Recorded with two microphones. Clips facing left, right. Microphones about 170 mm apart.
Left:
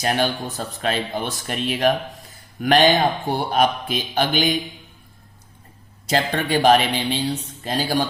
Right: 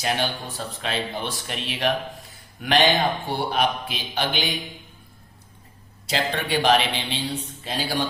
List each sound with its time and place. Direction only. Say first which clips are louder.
0.0 s a man's voice: left 4 dB; 45° left (ahead or behind)
6.1 s a man's voice: left 4 dB; 45° left (ahead or behind)